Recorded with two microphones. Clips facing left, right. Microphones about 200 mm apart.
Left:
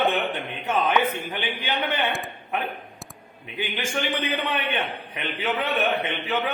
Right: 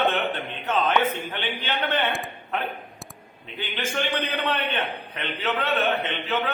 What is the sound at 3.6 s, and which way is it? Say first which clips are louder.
A man's voice: left 1 dB; 10° left (ahead or behind).